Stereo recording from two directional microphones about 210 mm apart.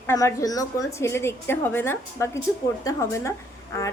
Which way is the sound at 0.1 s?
15° left (ahead or behind).